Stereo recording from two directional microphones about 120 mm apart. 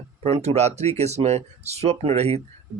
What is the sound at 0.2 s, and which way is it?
Speech, 60° right (ahead or behind).